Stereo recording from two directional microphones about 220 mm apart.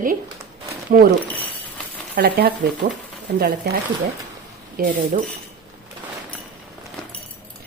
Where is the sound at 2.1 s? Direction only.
45° right (ahead or behind).